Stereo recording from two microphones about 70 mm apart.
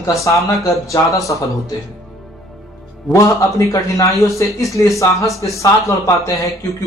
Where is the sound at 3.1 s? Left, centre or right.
Left.